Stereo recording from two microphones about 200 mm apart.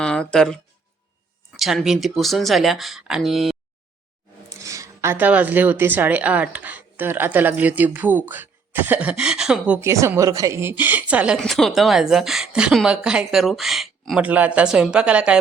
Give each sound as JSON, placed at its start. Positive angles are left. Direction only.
{"t": 0.0, "sound": "a woman's voice", "side_deg": 5}
{"t": 4.4, "sound": "a woman's voice", "side_deg": -15}